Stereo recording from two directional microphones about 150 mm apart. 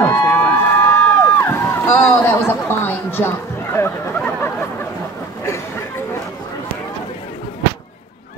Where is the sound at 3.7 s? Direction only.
15° left (ahead or behind).